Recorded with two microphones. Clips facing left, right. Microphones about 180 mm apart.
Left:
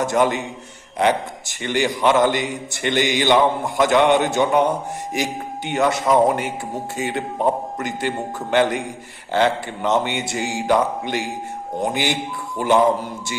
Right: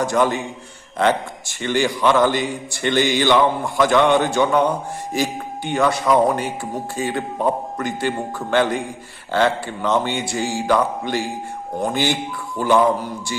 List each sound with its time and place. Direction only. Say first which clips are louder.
0.0 s a man's voice: even; 20° left (ahead or behind)